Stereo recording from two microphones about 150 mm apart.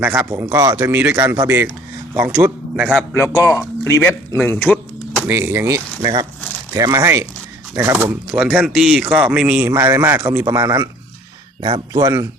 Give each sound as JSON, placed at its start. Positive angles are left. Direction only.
{"t": 0.0, "sound": "a man's voice", "side_deg": -10}
{"t": 3.3, "sound": "speech", "side_deg": 15}
{"t": 5.3, "sound": "a man's voice", "side_deg": -15}
{"t": 11.9, "sound": "speech", "side_deg": -20}